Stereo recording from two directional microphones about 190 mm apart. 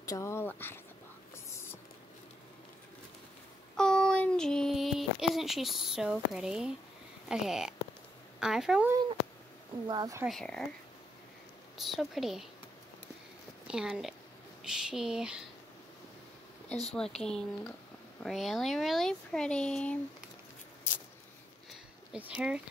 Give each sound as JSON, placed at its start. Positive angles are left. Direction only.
{"t": 0.0, "sound": "speech", "side_deg": 15}
{"t": 3.7, "sound": "child singing", "side_deg": 5}
{"t": 7.2, "sound": "speech", "side_deg": -5}
{"t": 9.8, "sound": "speech", "side_deg": -20}
{"t": 10.2, "sound": "speech", "side_deg": 5}
{"t": 11.7, "sound": "speech", "side_deg": 0}
{"t": 13.7, "sound": "speech", "side_deg": -5}
{"t": 16.9, "sound": "speech", "side_deg": 5}
{"t": 22.1, "sound": "speech", "side_deg": -5}